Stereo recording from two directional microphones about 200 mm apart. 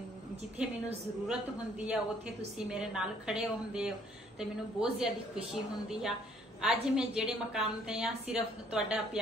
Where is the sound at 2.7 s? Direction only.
5° right (ahead or behind).